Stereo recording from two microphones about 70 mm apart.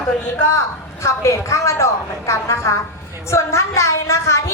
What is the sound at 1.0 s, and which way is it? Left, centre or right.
A woman's voice, left.